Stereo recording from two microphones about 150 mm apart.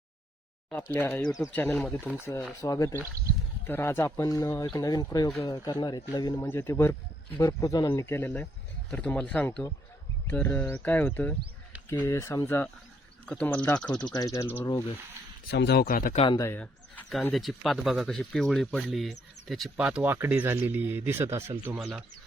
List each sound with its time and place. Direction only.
0.7 s speech: 10° left (ahead or behind); by 6.5 s 25° left (ahead or behind)
6.5 s speech: 15° left (ahead or behind)
14.1 s speech: 25° left (ahead or behind)
15.4 s speech: 90° left
16.1 s speech: 35° left (ahead or behind)
16.4 s speech: 15° left (ahead or behind); by 21.5 s 15° right (ahead or behind)
21.8 s speech: centre (ahead or behind)